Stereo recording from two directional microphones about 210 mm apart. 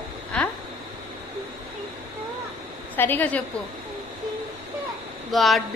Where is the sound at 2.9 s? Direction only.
10° left (ahead or behind).